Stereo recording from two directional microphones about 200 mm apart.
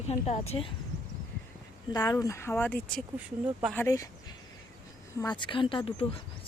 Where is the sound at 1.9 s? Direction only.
20° left (ahead or behind).